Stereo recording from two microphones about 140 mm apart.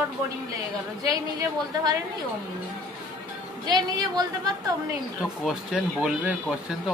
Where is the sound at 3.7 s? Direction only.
30° right (ahead or behind).